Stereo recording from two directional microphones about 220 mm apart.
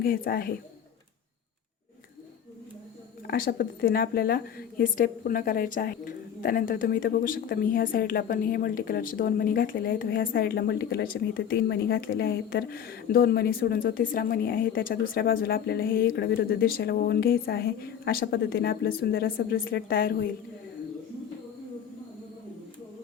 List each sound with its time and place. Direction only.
0.0 s a woman's voice: 40° left (ahead or behind)
3.2 s a woman's voice: 40° left (ahead or behind)